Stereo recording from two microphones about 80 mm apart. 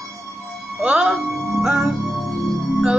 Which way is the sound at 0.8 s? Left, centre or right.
Centre.